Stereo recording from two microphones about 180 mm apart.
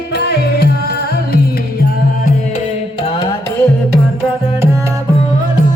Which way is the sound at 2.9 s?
20° left (ahead or behind).